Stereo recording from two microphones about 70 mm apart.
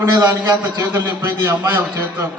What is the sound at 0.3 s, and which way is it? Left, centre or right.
A man's voice, right.